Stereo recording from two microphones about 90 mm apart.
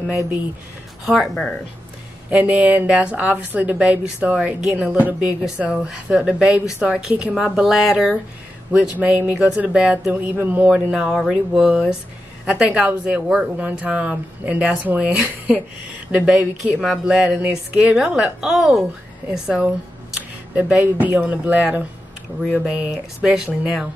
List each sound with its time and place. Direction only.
1.2 s speech: 5° left (ahead or behind)
2.2 s a woman's voice: 15° right (ahead or behind)
5.4 s a woman's voice: 5° right (ahead or behind)
8.9 s a woman's voice: 20° right (ahead or behind)
10.3 s a man's voice: 20° right (ahead or behind)
10.7 s a woman's voice: 10° right (ahead or behind)